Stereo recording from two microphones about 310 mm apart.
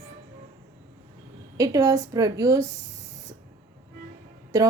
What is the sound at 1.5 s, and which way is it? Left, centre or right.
A woman's voice, centre.